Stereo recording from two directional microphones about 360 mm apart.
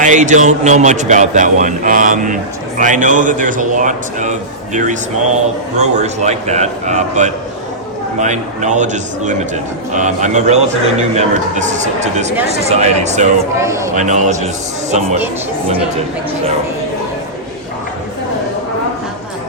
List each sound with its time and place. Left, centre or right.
0.0 s a man's voice: centre
13.6 s speech: centre
13.9 s a man's voice: centre